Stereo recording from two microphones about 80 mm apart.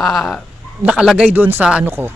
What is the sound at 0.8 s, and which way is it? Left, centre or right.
Speech, centre.